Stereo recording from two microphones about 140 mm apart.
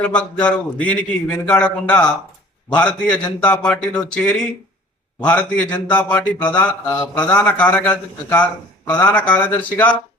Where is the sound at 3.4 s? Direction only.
5° left (ahead or behind).